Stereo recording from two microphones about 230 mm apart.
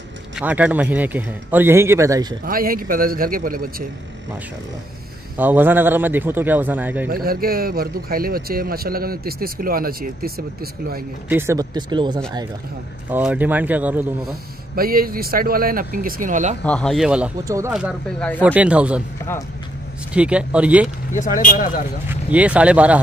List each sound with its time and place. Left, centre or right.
0.4 s a man's voice: centre
2.4 s a man's voice: right
5.4 s a man's voice: centre
7.1 s a man's voice: right
11.2 s a man's voice: centre
13.1 s a man's voice: centre
14.8 s a man's voice: right
16.6 s speech: centre
17.7 s speech: centre
20.1 s speech: centre
21.1 s speech: left
22.1 s speech: centre